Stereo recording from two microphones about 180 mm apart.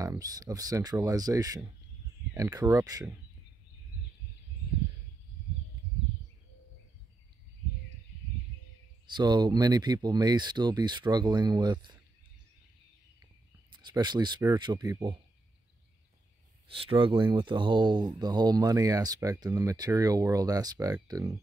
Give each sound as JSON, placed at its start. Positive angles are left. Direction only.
{"t": 0.0, "sound": "speech", "side_deg": -20}
{"t": 9.0, "sound": "speech", "side_deg": -25}
{"t": 13.2, "sound": "a sound", "side_deg": -25}
{"t": 14.4, "sound": "speech", "side_deg": -25}
{"t": 16.6, "sound": "speech", "side_deg": -30}